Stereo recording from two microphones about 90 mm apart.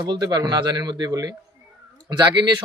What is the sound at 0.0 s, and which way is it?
A man's voice, 50° right (ahead or behind).